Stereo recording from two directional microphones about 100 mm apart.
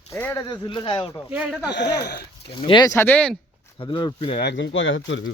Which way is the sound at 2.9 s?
25° left (ahead or behind).